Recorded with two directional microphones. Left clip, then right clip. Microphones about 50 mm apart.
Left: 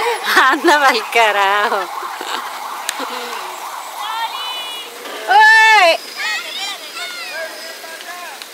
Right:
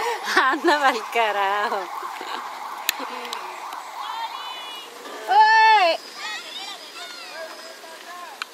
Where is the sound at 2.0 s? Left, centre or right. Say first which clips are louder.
Left 7 dB; centre.